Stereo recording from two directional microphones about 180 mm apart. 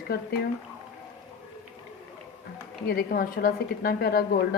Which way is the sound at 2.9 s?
55° left (ahead or behind).